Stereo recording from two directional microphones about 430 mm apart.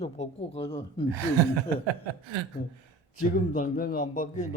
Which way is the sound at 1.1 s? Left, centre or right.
Right.